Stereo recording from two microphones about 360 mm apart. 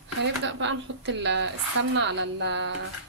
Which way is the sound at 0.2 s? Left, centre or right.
Right.